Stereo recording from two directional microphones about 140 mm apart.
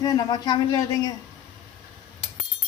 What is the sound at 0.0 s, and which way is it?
A woman's voice, 30° left (ahead or behind).